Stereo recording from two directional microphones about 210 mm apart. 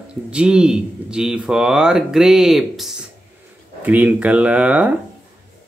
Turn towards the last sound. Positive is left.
turn(degrees=-5)  # may be behind; listen again after turning